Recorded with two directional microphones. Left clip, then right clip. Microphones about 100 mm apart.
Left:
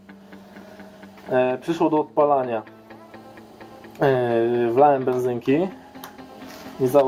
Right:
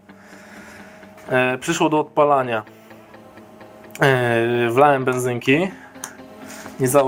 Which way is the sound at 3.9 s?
20° left (ahead or behind).